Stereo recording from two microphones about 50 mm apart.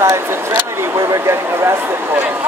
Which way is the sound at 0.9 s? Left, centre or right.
Right.